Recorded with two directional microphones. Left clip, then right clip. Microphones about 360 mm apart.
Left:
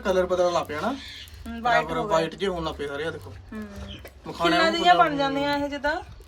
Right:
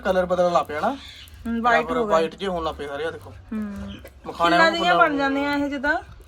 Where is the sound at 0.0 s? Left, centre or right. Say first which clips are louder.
Right 2 dB; centre.